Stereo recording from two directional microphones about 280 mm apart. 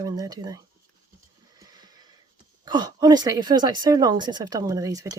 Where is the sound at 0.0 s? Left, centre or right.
Centre.